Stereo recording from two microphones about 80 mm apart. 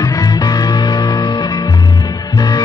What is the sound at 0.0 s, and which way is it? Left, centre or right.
Music, left.